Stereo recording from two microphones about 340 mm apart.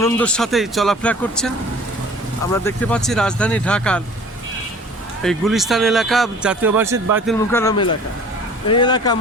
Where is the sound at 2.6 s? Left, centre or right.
Centre.